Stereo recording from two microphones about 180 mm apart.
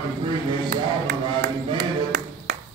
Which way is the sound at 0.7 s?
65° right (ahead or behind).